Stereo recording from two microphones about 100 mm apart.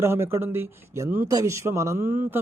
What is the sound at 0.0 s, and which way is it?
Speech, 25° right (ahead or behind).